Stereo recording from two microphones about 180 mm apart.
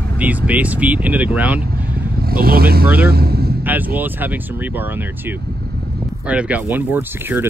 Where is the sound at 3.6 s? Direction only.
10° right (ahead or behind).